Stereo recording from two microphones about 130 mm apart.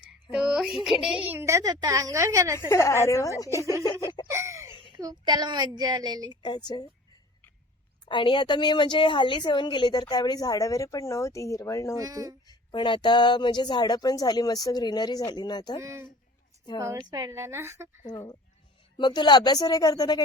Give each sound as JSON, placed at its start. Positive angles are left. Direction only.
{"t": 0.1, "sound": "a sound", "side_deg": -5}
{"t": 1.3, "sound": "a woman's voice", "side_deg": -20}
{"t": 2.6, "sound": "a woman's voice", "side_deg": 20}
{"t": 4.3, "sound": "a sound", "side_deg": -20}
{"t": 4.7, "sound": "a sound", "side_deg": 40}
{"t": 4.9, "sound": "a woman's voice", "side_deg": -30}
{"t": 6.2, "sound": "a woman's voice", "side_deg": 35}
{"t": 8.0, "sound": "a woman's voice", "side_deg": 40}
{"t": 11.9, "sound": "a woman's voice", "side_deg": -25}
{"t": 12.5, "sound": "a woman's voice", "side_deg": 35}
{"t": 15.8, "sound": "a woman's voice", "side_deg": -20}
{"t": 18.9, "sound": "a woman's voice", "side_deg": 35}